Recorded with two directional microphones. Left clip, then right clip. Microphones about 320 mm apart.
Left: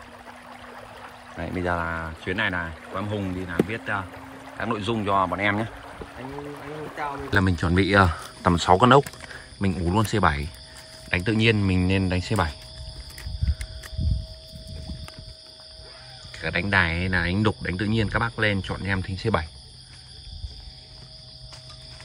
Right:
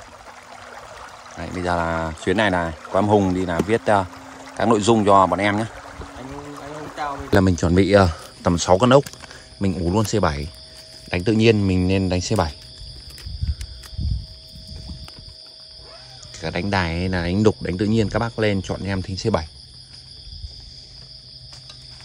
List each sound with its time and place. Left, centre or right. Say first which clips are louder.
1.4 s speech: right 4 dB; centre
7.3 s speech: right 5 dB; centre
16.3 s speech: left 1 dB; centre